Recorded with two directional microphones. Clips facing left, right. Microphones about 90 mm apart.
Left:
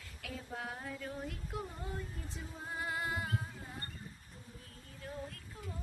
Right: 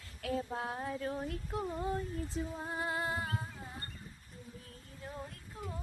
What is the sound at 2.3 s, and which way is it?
Music, 30° right (ahead or behind).